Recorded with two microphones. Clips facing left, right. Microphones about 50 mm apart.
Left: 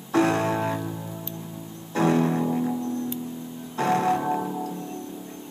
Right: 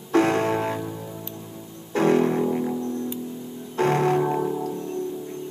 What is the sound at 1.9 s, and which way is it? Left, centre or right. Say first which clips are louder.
Music: right 2 dB; right.